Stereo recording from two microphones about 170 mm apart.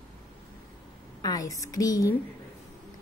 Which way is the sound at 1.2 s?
20° left (ahead or behind).